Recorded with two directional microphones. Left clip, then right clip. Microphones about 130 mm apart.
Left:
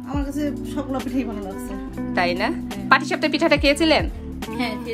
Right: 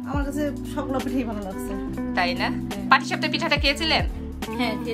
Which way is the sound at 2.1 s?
20° right (ahead or behind).